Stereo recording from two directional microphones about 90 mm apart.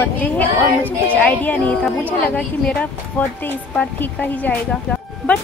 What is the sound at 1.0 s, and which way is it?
A woman's voice, 15° left (ahead or behind).